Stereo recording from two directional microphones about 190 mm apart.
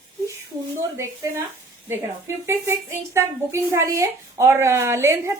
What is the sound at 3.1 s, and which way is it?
A woman's voice, 15° right (ahead or behind).